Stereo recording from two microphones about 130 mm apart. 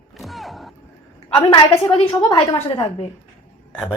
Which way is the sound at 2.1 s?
30° left (ahead or behind).